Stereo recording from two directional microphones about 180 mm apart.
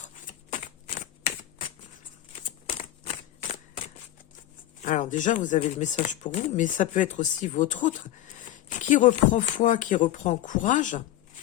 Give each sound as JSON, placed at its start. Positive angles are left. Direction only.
{"t": 0.0, "sound": "shuffling cards", "side_deg": 45}
{"t": 3.4, "sound": "shuffling cards", "side_deg": 40}
{"t": 4.8, "sound": "speech", "side_deg": 45}